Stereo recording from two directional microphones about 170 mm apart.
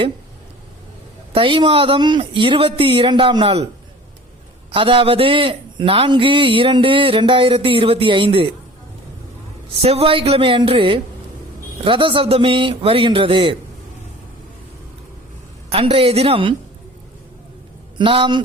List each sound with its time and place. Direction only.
1.3 s a man's voice: 30° right (ahead or behind)
4.7 s a man's voice: 30° right (ahead or behind)
9.8 s a man's voice: 35° right (ahead or behind)
15.7 s a man's voice: 35° right (ahead or behind)
17.9 s a man's voice: 30° right (ahead or behind)